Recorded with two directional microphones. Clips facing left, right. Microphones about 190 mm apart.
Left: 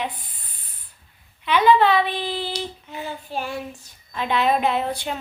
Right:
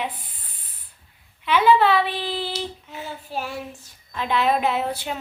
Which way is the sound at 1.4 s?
5° right (ahead or behind).